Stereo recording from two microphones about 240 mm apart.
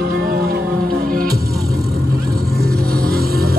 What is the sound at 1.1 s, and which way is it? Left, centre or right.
Music, right.